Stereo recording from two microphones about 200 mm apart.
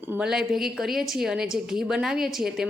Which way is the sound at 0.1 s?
5° right (ahead or behind).